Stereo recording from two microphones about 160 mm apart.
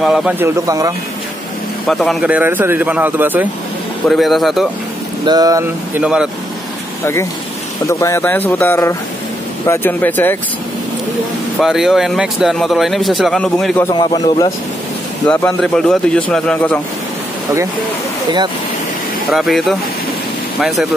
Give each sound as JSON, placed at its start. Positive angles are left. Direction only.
{"t": 0.0, "sound": "speech", "side_deg": -5}
{"t": 0.4, "sound": "speech", "side_deg": -20}
{"t": 1.9, "sound": "speech", "side_deg": 5}
{"t": 2.2, "sound": "a man's voice", "side_deg": -10}
{"t": 4.1, "sound": "speech", "side_deg": 0}
{"t": 5.2, "sound": "speech", "side_deg": -25}
{"t": 7.8, "sound": "speech", "side_deg": 20}
{"t": 11.5, "sound": "speech", "side_deg": 0}
{"t": 13.8, "sound": "speech", "side_deg": 25}
{"t": 15.2, "sound": "speech", "side_deg": 5}
{"t": 19.3, "sound": "speech", "side_deg": 0}